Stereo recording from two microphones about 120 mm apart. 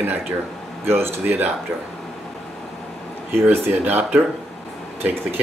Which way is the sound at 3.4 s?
15° right (ahead or behind).